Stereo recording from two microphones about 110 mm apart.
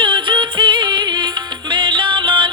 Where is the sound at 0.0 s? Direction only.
45° right (ahead or behind).